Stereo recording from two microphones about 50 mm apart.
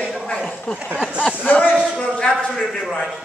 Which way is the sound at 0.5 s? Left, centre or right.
Left.